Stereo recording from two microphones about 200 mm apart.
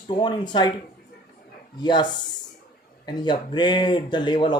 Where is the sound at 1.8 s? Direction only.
20° left (ahead or behind).